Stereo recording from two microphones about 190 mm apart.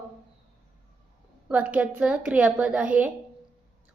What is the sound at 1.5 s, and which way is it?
A woman's voice, 5° right (ahead or behind).